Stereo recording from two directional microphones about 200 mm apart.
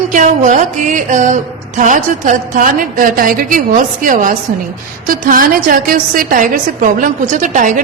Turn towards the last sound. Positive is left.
turn(degrees=-40)  # may be behind; listen again after turning